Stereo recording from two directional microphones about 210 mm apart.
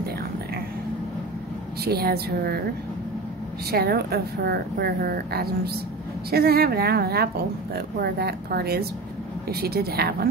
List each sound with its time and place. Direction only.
1.9 s speech: 50° right (ahead or behind)
3.7 s speech: 50° right (ahead or behind)